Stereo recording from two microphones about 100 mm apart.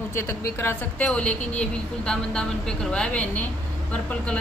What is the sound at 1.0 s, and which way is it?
A woman's voice, 10° left (ahead or behind).